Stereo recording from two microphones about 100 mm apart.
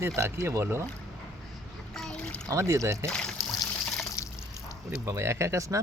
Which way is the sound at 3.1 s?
5° left (ahead or behind).